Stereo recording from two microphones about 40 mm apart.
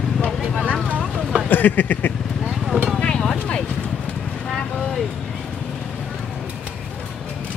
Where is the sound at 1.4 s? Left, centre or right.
Left.